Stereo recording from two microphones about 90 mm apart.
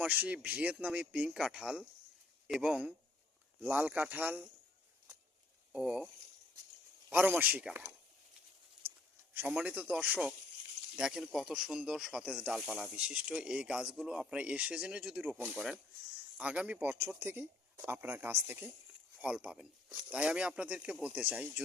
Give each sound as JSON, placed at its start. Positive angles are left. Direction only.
{"t": 0.0, "sound": "speech", "side_deg": -15}
{"t": 5.7, "sound": "speech", "side_deg": -10}
{"t": 7.1, "sound": "speech", "side_deg": -15}
{"t": 9.6, "sound": "speech", "side_deg": -15}
{"t": 15.4, "sound": "speech", "side_deg": -20}
{"t": 16.8, "sound": "speech", "side_deg": -25}
{"t": 19.1, "sound": "speech", "side_deg": -10}